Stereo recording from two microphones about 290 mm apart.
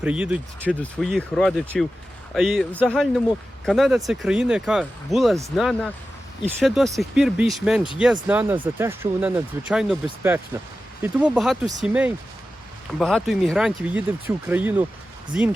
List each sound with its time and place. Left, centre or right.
0.0 s speech: centre